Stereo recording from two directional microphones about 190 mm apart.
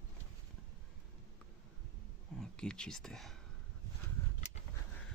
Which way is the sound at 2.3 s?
5° left (ahead or behind).